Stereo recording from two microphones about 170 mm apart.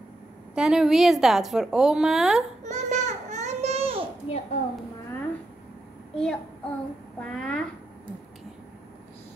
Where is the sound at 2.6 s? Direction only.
45° right (ahead or behind).